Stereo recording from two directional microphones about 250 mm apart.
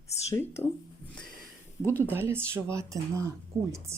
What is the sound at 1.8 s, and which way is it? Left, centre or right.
Speech, centre.